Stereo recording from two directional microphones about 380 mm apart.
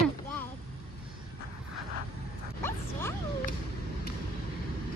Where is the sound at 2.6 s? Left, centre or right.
Centre.